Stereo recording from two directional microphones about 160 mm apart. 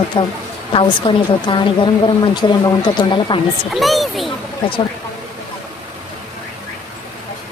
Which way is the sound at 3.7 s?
Centre (ahead or behind).